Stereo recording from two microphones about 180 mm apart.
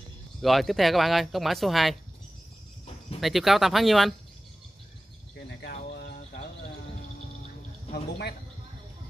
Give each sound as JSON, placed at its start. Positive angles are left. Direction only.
{"t": 0.4, "sound": "speech", "side_deg": 0}
{"t": 3.2, "sound": "speech", "side_deg": 0}
{"t": 5.5, "sound": "cricket", "side_deg": 65}
{"t": 7.9, "sound": "speech", "side_deg": 65}